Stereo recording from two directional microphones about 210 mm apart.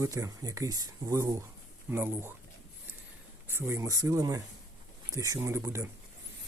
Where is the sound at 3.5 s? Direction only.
10° right (ahead or behind).